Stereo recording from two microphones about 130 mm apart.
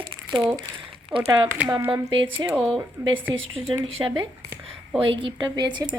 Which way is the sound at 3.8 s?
40° right (ahead or behind).